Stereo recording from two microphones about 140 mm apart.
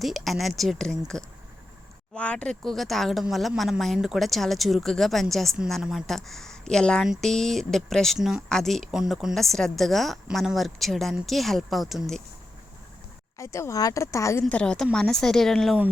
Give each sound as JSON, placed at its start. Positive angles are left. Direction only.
{"t": 0.0, "sound": "speech", "side_deg": 0}
{"t": 13.4, "sound": "speech", "side_deg": 20}
{"t": 14.4, "sound": "speech", "side_deg": 5}